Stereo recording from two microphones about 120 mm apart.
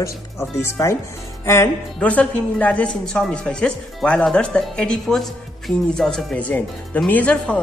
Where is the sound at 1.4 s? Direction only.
25° left (ahead or behind).